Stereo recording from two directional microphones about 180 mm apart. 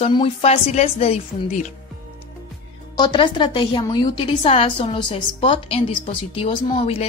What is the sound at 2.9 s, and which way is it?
A woman's voice, 25° left (ahead or behind).